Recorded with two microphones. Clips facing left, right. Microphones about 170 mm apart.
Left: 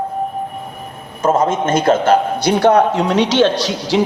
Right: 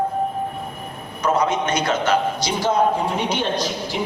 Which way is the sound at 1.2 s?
45° left (ahead or behind).